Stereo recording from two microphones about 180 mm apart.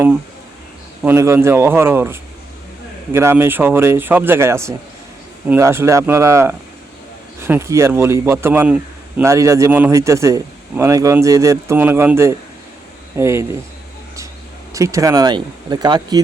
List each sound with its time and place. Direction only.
1.0 s a man's voice: 15° right (ahead or behind)
14.7 s speech: 15° right (ahead or behind)